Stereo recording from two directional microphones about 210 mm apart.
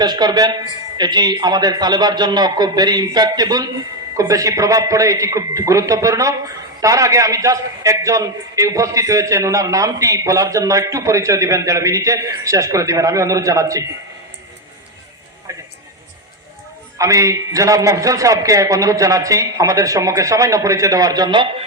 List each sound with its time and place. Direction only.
0.0 s a man's voice: 20° right (ahead or behind)
15.5 s music: 15° right (ahead or behind)
17.0 s a man's voice: 15° right (ahead or behind)